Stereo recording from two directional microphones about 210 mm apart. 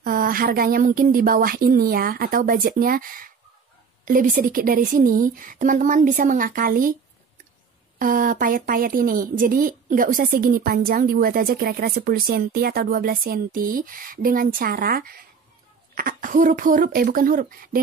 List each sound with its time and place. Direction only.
0.0 s a woman's voice: 40° right (ahead or behind)
8.0 s a woman's voice: 40° right (ahead or behind)